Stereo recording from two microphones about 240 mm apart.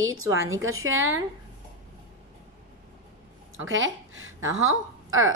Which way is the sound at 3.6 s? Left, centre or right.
Right.